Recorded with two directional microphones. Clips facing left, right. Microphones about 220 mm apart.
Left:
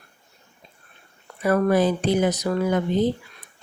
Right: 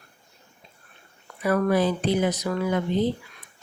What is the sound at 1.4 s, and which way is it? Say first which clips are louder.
Speech: left 3 dB; 40° left (ahead or behind).